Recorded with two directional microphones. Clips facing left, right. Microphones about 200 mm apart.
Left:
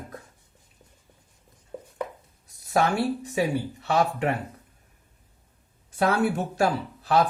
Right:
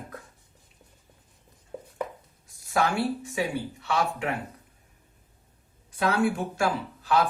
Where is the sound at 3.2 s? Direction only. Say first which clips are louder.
Left 4 dB; 40° left (ahead or behind).